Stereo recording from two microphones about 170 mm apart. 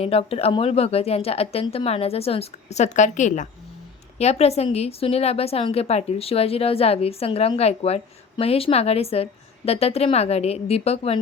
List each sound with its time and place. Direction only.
0.0 s a woman's voice: 35° left (ahead or behind)